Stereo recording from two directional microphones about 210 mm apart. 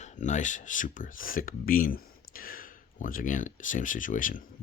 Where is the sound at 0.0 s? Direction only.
35° left (ahead or behind).